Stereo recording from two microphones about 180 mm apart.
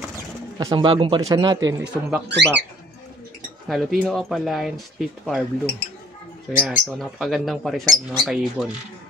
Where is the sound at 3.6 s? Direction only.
Centre (ahead or behind).